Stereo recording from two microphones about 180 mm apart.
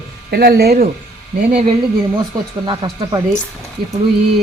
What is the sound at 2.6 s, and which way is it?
Speech, 25° right (ahead or behind).